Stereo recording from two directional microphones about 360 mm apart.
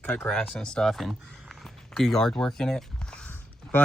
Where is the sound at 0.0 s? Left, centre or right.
Centre.